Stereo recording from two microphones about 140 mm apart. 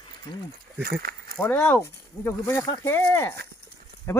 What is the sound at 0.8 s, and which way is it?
Speech, 90° right.